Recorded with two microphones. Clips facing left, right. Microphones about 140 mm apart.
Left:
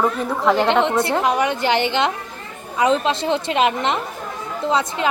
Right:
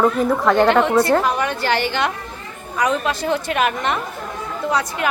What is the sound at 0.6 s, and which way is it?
A woman's voice, 20° left (ahead or behind).